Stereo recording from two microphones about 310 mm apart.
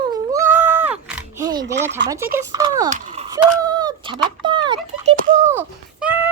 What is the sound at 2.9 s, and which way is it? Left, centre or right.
Speech, right.